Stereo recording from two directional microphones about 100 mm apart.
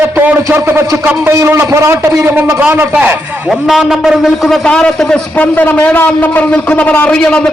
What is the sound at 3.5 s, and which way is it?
A man's voice, centre (ahead or behind).